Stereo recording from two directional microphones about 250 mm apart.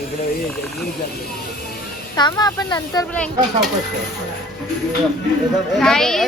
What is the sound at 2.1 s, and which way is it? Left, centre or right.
Speech, centre.